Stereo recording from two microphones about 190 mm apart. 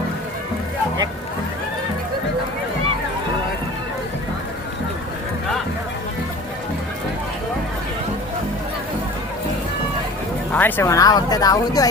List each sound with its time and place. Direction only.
10.5 s speech: 10° left (ahead or behind)